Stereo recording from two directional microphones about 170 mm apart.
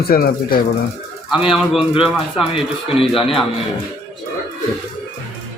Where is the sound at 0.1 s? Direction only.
60° left (ahead or behind).